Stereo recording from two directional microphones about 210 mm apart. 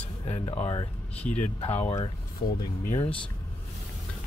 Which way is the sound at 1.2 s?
5° left (ahead or behind).